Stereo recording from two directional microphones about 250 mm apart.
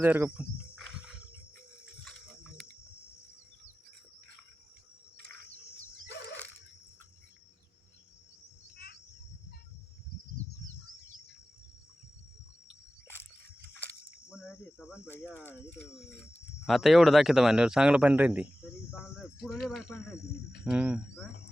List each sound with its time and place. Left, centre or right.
0.0 s wild animals: centre
1.8 s pig: centre
8.7 s a sound: left
13.7 s a sound: centre
16.6 s a man's voice: centre
18.9 s cricket: centre
19.6 s a man's voice: centre